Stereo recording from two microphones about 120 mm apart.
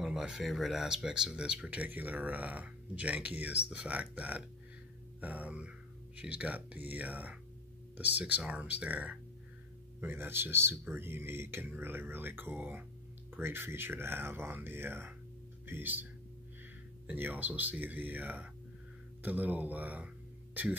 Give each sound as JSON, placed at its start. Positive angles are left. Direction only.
{"t": 0.0, "sound": "speech", "side_deg": -5}
{"t": 17.1, "sound": "speech", "side_deg": -15}